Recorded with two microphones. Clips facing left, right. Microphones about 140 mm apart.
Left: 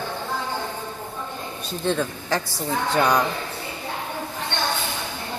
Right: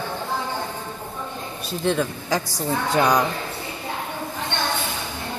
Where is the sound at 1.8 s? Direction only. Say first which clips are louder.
Right 2 dB; 5° right (ahead or behind).